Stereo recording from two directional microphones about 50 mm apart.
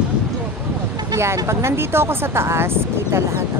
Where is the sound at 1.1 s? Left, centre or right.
Right.